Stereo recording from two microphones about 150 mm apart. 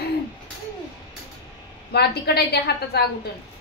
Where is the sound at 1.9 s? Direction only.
90° left.